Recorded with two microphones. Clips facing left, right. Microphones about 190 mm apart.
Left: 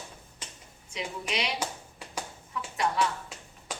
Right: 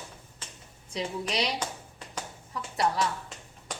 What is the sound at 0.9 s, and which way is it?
Speech, 35° right (ahead or behind).